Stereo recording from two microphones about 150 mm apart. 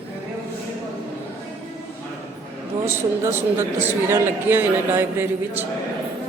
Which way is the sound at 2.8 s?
15° right (ahead or behind).